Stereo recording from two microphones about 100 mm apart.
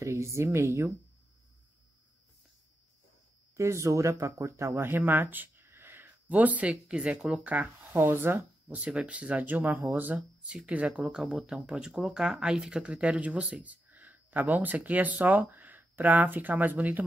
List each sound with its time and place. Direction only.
0.0 s speech: 30° right (ahead or behind)
3.5 s speech: 30° right (ahead or behind)